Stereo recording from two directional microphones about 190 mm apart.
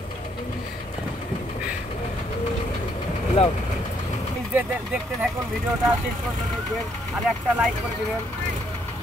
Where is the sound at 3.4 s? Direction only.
30° left (ahead or behind).